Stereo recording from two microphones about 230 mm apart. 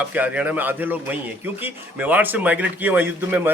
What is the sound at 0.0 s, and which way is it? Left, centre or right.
Speech, centre.